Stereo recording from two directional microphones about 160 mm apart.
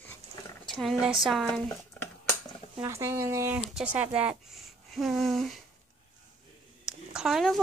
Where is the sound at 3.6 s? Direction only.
5° right (ahead or behind).